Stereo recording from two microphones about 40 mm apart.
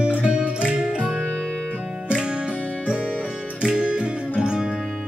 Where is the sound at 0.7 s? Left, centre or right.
Right.